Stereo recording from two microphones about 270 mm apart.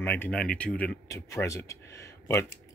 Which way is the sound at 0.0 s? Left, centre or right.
Centre.